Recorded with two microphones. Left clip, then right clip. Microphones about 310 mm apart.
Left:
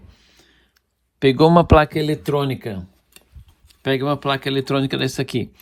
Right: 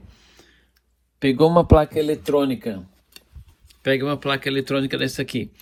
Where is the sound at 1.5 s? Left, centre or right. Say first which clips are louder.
Left 2 dB; right.